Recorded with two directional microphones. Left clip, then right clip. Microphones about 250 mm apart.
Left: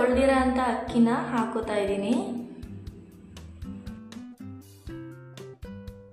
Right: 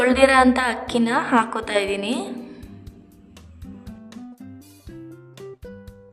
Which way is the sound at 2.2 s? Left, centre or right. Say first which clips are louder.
Right 2 dB; centre.